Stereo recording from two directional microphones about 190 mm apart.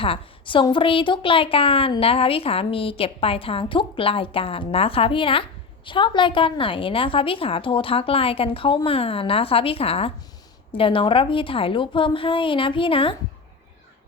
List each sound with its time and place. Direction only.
0.0 s a woman's voice: 30° left (ahead or behind)